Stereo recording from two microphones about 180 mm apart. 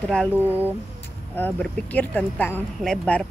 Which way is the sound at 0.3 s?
10° right (ahead or behind).